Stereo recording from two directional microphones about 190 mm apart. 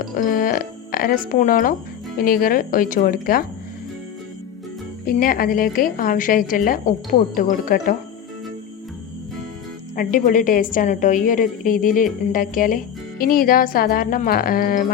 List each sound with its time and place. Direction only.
0.2 s a woman's voice: 45° left (ahead or behind)
5.2 s a woman's voice: 50° left (ahead or behind)
9.9 s a woman's voice: 45° left (ahead or behind)